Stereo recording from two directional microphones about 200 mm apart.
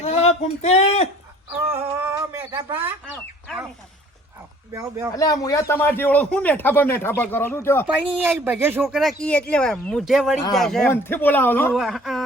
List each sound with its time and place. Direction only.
0.0 s speech: 30° left (ahead or behind)
1.7 s a sound: 10° right (ahead or behind)
2.5 s speech: 20° right (ahead or behind)
4.7 s speech: 15° right (ahead or behind)
5.1 s speech: 15° left (ahead or behind)
7.9 s speech: 5° right (ahead or behind)